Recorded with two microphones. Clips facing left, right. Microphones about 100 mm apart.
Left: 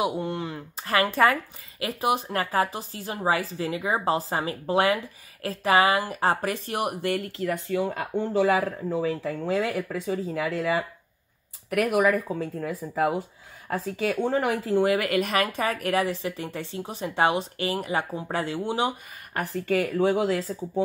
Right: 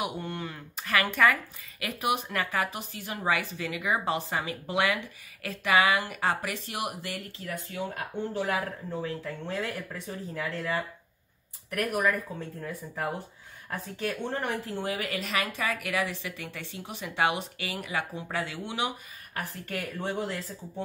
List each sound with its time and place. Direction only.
0.0 s speech: 30° left (ahead or behind); by 13.1 s 75° left (ahead or behind)
13.7 s speech: 90° left; by 18.9 s 40° left (ahead or behind)
19.3 s speech: 85° left